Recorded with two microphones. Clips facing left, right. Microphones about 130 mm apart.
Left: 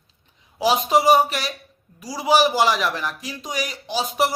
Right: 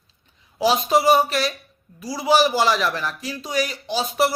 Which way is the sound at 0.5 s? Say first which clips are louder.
Even; 15° left (ahead or behind).